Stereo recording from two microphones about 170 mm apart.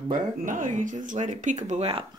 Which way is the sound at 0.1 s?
50° right (ahead or behind).